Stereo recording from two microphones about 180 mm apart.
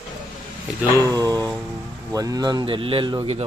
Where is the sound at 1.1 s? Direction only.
20° right (ahead or behind).